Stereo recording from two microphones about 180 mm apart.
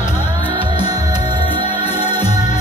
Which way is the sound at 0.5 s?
25° right (ahead or behind).